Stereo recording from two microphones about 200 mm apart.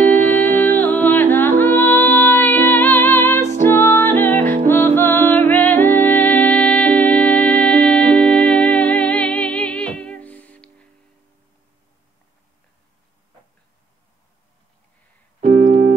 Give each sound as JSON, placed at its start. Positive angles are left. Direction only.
{"t": 0.0, "sound": "music", "side_deg": 10}
{"t": 15.4, "sound": "keyboard", "side_deg": -35}